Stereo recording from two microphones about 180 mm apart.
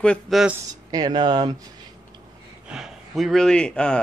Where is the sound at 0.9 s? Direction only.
25° right (ahead or behind).